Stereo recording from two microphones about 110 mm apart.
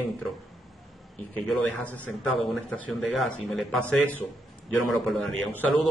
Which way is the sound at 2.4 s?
10° left (ahead or behind).